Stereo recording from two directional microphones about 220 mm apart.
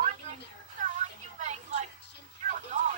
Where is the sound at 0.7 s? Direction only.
35° right (ahead or behind).